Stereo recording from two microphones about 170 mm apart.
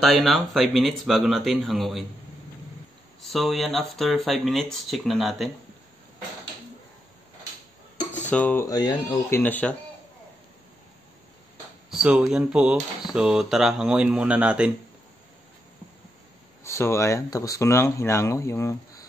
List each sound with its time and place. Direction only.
0.0 s speech: centre (ahead or behind)
3.2 s speech: centre (ahead or behind)
8.0 s dishes: 45° left (ahead or behind)
8.3 s speech: 10° left (ahead or behind)
8.6 s a sound: 20° left (ahead or behind)
9.4 s speech: 10° left (ahead or behind)
11.9 s speech: 5° right (ahead or behind)
16.6 s speech: 15° left (ahead or behind)